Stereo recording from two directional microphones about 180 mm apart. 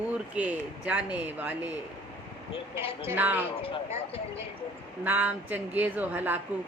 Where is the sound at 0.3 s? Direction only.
5° right (ahead or behind).